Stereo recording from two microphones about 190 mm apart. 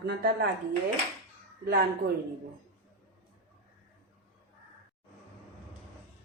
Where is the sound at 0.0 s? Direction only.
60° right (ahead or behind).